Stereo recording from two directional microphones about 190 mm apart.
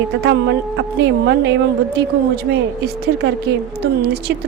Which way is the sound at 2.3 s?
60° right (ahead or behind).